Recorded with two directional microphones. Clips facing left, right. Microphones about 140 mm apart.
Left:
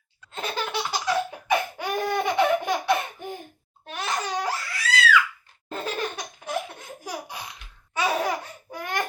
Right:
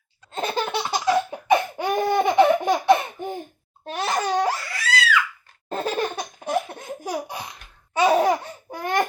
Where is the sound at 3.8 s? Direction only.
35° right (ahead or behind).